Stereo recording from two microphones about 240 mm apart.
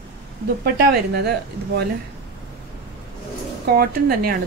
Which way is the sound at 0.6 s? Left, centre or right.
Right.